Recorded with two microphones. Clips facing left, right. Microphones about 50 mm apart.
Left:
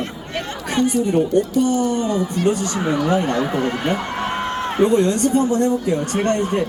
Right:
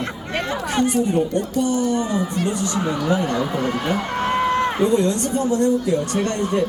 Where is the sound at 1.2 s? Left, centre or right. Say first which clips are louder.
Left 3 dB; left.